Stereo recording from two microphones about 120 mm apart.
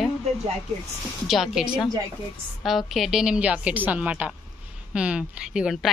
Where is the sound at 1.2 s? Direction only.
Centre (ahead or behind).